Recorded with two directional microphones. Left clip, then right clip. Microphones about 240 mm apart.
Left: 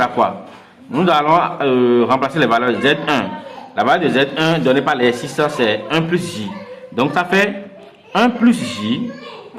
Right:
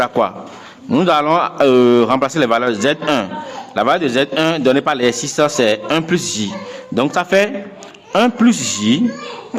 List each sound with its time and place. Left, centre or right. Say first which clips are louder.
0.0 s a man's voice: even; right